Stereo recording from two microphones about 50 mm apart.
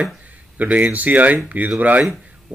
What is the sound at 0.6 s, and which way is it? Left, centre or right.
Speech, right.